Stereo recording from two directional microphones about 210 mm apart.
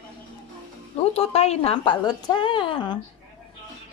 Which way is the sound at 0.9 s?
30° left (ahead or behind).